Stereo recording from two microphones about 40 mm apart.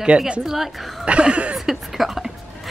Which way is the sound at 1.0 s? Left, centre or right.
Right.